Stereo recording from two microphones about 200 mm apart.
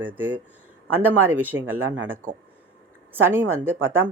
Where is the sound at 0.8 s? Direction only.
90° right.